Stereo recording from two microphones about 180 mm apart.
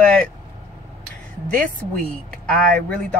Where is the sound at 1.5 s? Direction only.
5° left (ahead or behind).